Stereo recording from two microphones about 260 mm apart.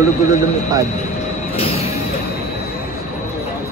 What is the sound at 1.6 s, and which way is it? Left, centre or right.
Music, left.